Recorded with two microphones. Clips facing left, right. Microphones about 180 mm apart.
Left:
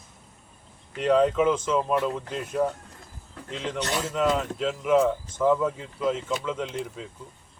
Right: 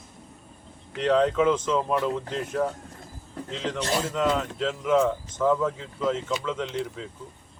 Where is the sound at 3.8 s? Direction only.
30° right (ahead or behind).